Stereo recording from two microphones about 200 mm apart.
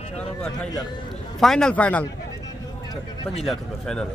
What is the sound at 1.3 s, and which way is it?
Speech, centre (ahead or behind).